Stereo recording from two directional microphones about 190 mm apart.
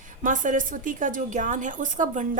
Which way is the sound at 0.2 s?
45° right (ahead or behind).